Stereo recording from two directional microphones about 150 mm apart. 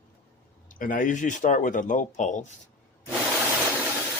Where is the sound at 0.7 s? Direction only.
65° left (ahead or behind).